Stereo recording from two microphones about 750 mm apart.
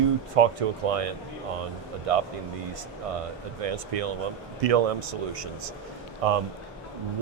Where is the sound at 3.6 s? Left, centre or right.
Right.